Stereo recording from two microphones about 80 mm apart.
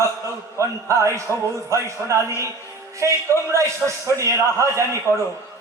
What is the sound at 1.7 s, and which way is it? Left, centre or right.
A man's voice, right.